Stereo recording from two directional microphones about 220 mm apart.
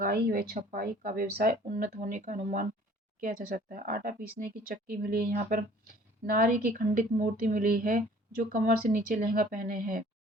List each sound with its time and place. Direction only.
0.0 s speech: 40° right (ahead or behind)